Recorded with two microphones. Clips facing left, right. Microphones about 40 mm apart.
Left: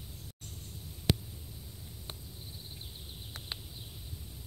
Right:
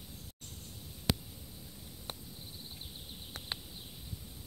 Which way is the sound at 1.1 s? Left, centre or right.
Left.